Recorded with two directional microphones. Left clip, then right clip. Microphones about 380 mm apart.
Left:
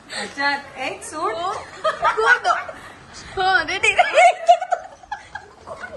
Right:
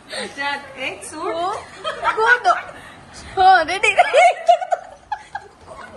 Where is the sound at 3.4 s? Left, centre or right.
Centre.